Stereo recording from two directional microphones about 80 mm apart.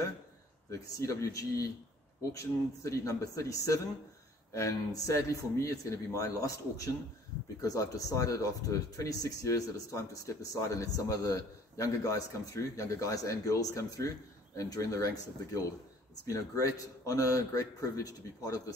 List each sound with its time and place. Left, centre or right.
0.7 s speech: left